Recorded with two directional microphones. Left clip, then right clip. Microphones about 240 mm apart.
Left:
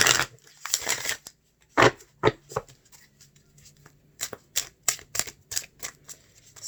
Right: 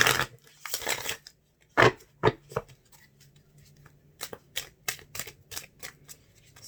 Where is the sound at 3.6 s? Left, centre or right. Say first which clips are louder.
Left 4 dB; centre.